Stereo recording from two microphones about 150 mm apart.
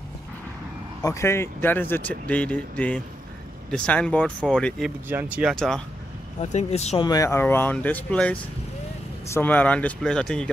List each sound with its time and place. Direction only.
1.0 s speech: 20° left (ahead or behind)
5.0 s speech: 10° right (ahead or behind)
6.4 s speech: 50° left (ahead or behind)
7.0 s speech: 25° left (ahead or behind); by 10.5 s 5° left (ahead or behind)